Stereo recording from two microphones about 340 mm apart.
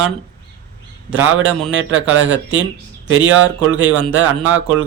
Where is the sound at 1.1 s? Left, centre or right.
Right.